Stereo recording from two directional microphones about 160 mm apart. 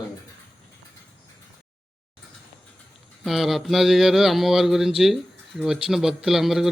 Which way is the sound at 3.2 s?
Centre (ahead or behind).